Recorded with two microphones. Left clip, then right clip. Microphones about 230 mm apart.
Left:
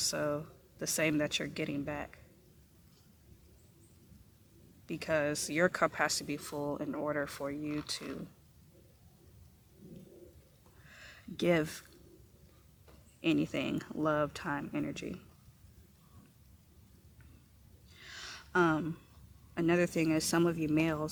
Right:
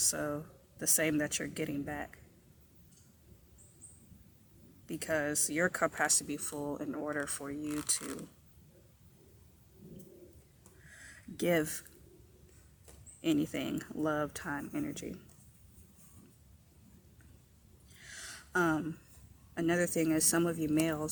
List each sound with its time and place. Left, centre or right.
0.0 s speech: left
4.9 s speech: left
10.9 s a sound: left
13.2 s speech: left
18.0 s a sound: left
19.5 s speech: left